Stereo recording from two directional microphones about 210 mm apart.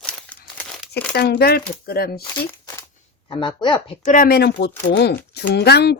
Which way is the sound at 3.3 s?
20° left (ahead or behind).